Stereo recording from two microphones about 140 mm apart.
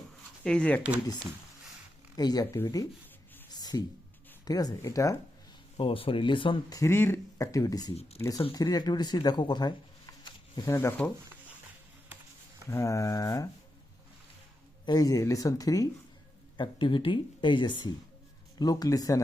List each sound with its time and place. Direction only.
0.4 s speech: 10° left (ahead or behind)
2.1 s speech: 30° left (ahead or behind)
3.5 s a sound: 30° left (ahead or behind)
4.4 s speech: 25° left (ahead or behind)
5.7 s speech: 40° left (ahead or behind)
6.7 s speech: 20° left (ahead or behind)
7.9 s speech: 45° left (ahead or behind)
8.5 s speech: 30° left (ahead or behind)
10.7 s speech: 20° left (ahead or behind)
12.7 s speech: 20° left (ahead or behind)
14.8 s speech: 25° left (ahead or behind)
16.6 s speech: 35° left (ahead or behind)